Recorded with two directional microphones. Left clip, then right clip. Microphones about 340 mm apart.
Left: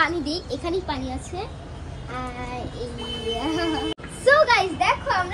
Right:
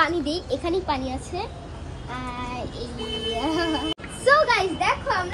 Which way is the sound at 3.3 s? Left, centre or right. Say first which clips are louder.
Even; centre.